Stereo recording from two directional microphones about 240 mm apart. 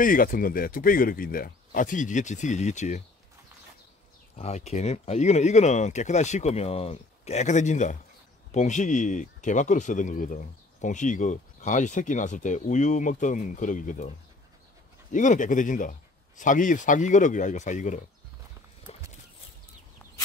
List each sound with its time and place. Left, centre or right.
0.0 s speech: left
4.4 s speech: left